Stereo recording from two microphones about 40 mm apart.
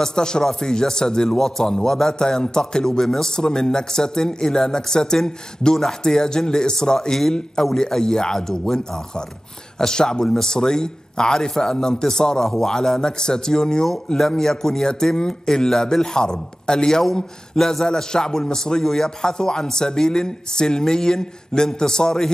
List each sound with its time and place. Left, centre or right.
0.0 s a man's voice: centre